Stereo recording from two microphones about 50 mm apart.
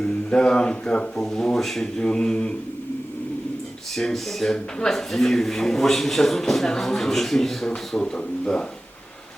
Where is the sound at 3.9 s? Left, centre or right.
Centre.